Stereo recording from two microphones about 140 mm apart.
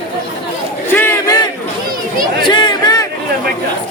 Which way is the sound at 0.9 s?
15° left (ahead or behind).